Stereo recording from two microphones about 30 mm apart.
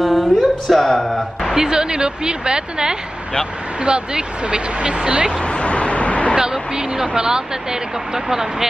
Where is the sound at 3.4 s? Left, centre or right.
Right.